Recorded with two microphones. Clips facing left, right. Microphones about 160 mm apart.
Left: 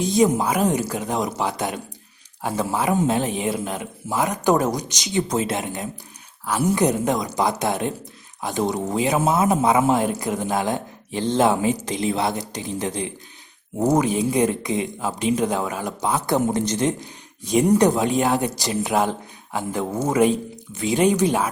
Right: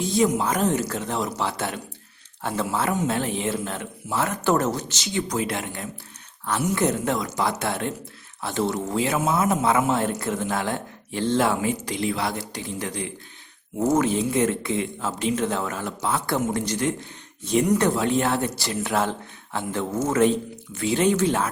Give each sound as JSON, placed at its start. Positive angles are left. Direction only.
{"t": 0.0, "sound": "speech", "side_deg": 20}